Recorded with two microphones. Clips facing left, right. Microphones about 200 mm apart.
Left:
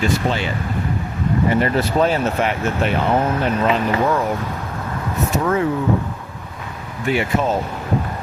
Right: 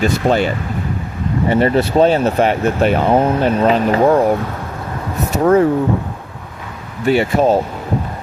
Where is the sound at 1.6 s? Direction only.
30° right (ahead or behind).